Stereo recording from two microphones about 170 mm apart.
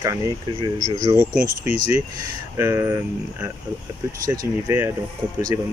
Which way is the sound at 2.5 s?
15° right (ahead or behind).